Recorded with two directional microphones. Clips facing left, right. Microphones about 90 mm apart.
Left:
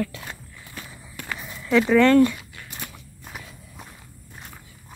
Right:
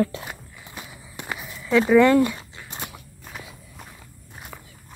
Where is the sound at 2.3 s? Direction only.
25° right (ahead or behind).